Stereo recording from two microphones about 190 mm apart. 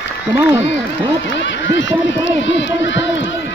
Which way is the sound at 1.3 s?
75° left (ahead or behind).